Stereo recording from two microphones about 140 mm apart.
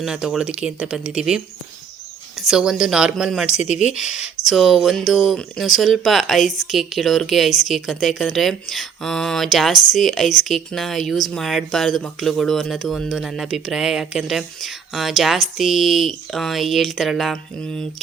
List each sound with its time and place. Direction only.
0.0 s speech: 5° right (ahead or behind)
2.4 s speech: 5° right (ahead or behind)
3.5 s speech: 55° left (ahead or behind)
3.8 s speech: 5° right (ahead or behind)